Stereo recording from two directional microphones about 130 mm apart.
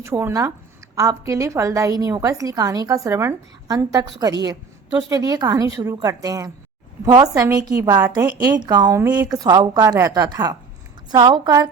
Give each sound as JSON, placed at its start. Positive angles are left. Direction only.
{"t": 0.0, "sound": "a woman's voice", "side_deg": -20}